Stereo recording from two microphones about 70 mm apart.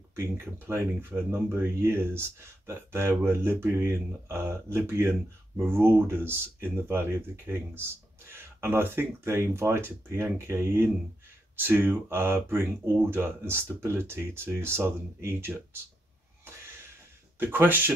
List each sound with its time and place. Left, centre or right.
0.1 s speech: right
17.4 s speech: right